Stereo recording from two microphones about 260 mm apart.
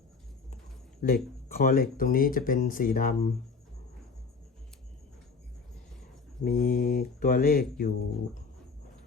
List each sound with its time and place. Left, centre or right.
1.0 s speech: left
6.4 s speech: left